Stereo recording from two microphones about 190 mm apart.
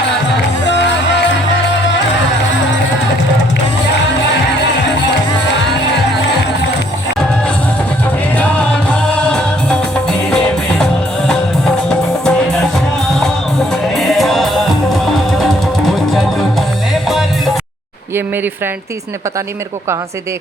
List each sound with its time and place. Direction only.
0.6 s music: 70° left (ahead or behind)
9.1 s music: 5° left (ahead or behind)
11.9 s music: 5° left (ahead or behind)
13.9 s music: centre (ahead or behind)